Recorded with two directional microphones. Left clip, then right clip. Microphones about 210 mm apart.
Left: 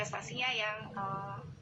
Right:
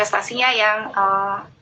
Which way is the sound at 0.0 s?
45° right (ahead or behind).